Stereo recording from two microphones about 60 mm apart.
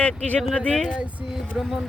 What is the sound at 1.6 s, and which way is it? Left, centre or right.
Speech, centre.